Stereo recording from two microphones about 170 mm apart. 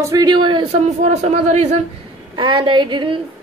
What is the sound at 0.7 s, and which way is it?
Speech, 40° right (ahead or behind).